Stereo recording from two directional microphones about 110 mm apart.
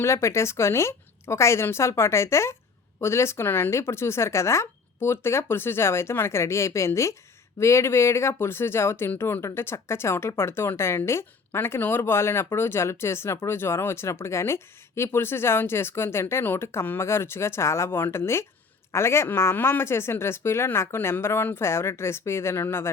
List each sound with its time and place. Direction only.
0.0 s speech: 25° left (ahead or behind)